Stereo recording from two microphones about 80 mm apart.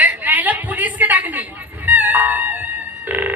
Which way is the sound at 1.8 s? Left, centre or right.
Right.